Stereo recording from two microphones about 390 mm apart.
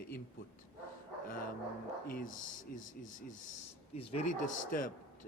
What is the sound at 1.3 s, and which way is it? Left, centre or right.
A man's voice, left.